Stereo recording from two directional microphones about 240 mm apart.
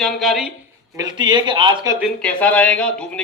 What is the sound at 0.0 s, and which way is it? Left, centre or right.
Speech, centre.